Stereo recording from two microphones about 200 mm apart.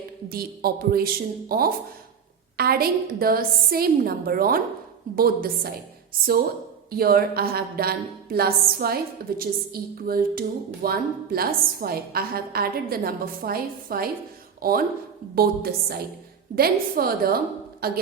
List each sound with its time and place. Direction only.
0.3 s a woman's voice: 50° right (ahead or behind)